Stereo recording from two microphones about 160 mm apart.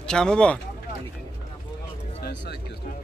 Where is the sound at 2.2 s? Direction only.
90° left.